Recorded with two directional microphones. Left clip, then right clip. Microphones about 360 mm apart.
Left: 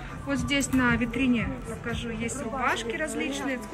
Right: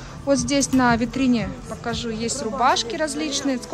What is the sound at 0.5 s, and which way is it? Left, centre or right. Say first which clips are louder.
A woman's voice: right 3 dB; centre.